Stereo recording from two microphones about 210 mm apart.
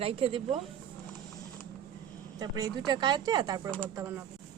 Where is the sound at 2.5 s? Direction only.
20° right (ahead or behind).